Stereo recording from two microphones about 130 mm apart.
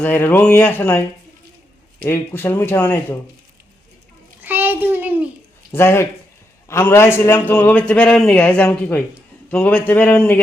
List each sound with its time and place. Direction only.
0.0 s a man's voice: 15° left (ahead or behind)
2.0 s a man's voice: 20° left (ahead or behind)
4.4 s child singing: 15° right (ahead or behind)
5.7 s a man's voice: 20° left (ahead or behind)